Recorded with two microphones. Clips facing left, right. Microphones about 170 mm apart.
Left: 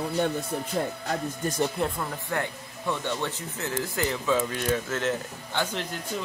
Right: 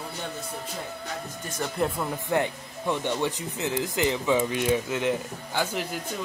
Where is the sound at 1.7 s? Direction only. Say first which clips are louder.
Right 2 dB; 5° right (ahead or behind).